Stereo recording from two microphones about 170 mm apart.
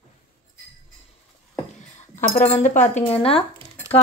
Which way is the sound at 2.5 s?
45° left (ahead or behind).